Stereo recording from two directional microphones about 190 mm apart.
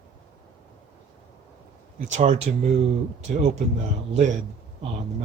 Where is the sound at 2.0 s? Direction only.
40° right (ahead or behind).